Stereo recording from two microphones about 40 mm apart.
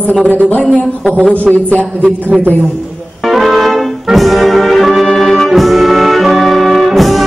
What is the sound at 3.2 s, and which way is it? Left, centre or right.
Brass instrument, centre.